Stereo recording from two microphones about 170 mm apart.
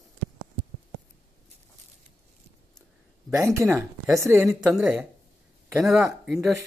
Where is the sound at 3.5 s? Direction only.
15° right (ahead or behind).